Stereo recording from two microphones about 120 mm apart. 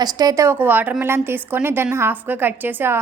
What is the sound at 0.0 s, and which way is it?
Speech, 30° right (ahead or behind).